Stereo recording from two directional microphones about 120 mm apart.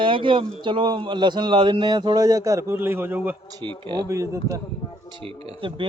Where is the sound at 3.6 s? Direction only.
40° right (ahead or behind).